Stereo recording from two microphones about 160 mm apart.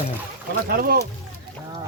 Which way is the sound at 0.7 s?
70° right (ahead or behind).